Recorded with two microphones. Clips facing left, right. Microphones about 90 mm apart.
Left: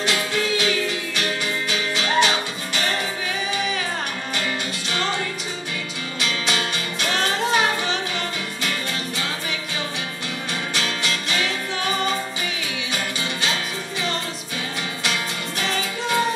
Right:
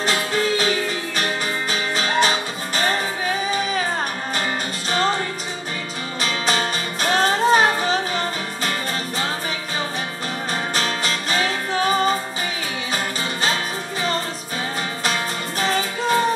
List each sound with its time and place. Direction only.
0.0 s music: 40° right (ahead or behind)
4.9 s music: 40° right (ahead or behind)
6.2 s music: 40° right (ahead or behind)
10.5 s music: 40° right (ahead or behind)
15.6 s music: 40° right (ahead or behind)